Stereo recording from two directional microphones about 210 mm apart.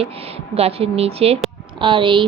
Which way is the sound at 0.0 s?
30° right (ahead or behind).